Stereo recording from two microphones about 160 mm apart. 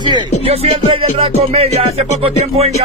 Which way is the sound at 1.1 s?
35° right (ahead or behind).